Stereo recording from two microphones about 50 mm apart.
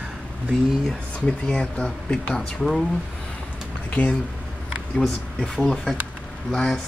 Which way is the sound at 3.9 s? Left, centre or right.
Left.